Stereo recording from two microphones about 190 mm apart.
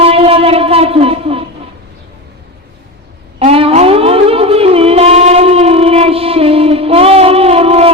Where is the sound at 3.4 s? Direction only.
30° right (ahead or behind).